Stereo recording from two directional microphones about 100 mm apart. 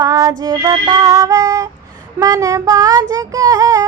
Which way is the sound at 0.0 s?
35° right (ahead or behind).